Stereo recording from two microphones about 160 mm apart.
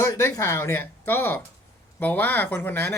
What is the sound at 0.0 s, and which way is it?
Speech, 20° left (ahead or behind).